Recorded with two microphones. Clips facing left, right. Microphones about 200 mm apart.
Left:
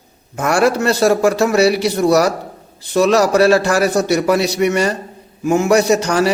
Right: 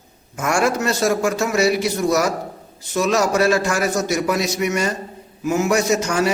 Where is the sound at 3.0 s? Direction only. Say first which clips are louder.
Left 5 dB; 35° left (ahead or behind).